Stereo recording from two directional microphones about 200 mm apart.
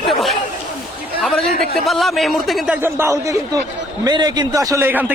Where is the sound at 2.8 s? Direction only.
15° right (ahead or behind).